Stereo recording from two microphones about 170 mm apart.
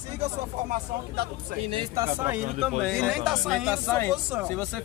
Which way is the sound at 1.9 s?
15° right (ahead or behind).